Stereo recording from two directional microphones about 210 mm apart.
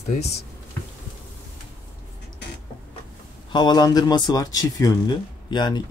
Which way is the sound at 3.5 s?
20° left (ahead or behind).